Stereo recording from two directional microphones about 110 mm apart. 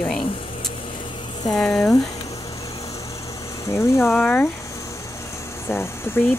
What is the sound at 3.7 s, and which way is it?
Speech, 25° left (ahead or behind).